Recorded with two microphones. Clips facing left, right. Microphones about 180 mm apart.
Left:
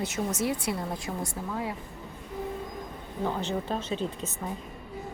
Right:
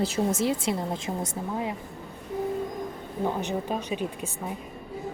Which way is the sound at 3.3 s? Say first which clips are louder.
Right 1 dB; 15° right (ahead or behind).